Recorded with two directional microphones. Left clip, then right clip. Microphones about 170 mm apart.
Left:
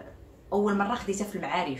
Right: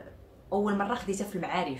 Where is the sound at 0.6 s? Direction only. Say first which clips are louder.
Left 3 dB; 15° right (ahead or behind).